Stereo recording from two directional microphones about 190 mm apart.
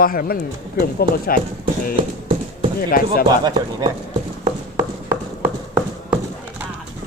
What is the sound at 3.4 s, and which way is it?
Speech, 20° right (ahead or behind).